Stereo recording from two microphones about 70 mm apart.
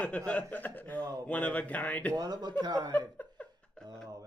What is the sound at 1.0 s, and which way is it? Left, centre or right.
Speech, right.